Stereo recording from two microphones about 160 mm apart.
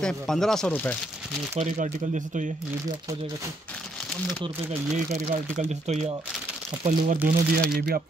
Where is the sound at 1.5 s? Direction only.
50° right (ahead or behind).